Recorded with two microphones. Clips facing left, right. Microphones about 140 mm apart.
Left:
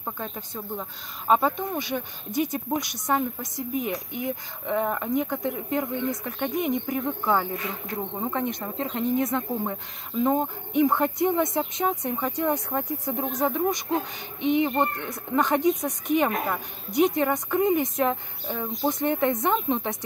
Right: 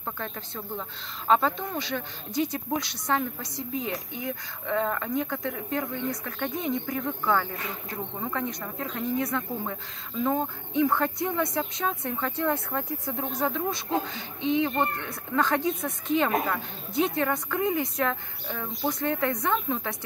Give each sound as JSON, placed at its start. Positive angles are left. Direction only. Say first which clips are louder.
{"t": 0.0, "sound": "speech", "louder": "left 1 dB", "side_deg": 15}